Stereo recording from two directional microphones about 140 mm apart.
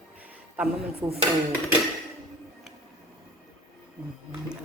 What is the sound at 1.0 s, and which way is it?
Speech, 30° right (ahead or behind).